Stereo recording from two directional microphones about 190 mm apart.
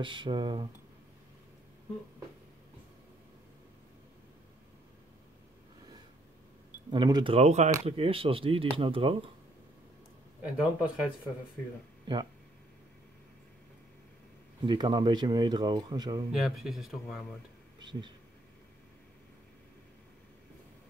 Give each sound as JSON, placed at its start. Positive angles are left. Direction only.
{"t": 0.0, "sound": "speech", "side_deg": -25}
{"t": 6.9, "sound": "speech", "side_deg": -25}
{"t": 10.4, "sound": "speech", "side_deg": -5}
{"t": 14.7, "sound": "speech", "side_deg": -25}
{"t": 16.3, "sound": "speech", "side_deg": 0}
{"t": 17.7, "sound": "a sound", "side_deg": -25}